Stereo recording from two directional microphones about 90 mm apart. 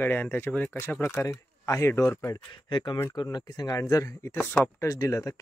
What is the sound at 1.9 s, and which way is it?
Speech, 25° left (ahead or behind).